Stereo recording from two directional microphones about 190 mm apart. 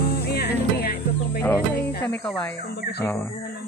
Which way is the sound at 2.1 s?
5° left (ahead or behind).